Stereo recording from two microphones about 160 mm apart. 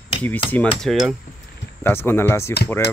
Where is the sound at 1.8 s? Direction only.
15° left (ahead or behind).